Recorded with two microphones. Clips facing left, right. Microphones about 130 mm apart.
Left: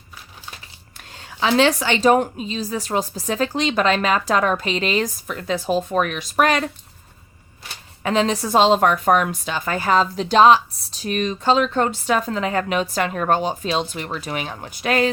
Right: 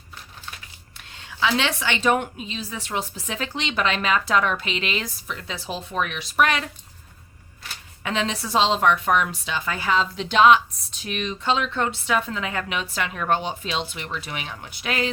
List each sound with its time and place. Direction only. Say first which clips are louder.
1.3 s a woman's voice: left 6 dB; 40° left (ahead or behind)
8.0 s a woman's voice: left 7 dB; 40° left (ahead or behind)